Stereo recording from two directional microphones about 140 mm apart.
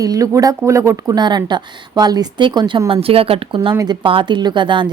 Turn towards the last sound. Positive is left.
turn(degrees=-35)  # may be behind; listen again after turning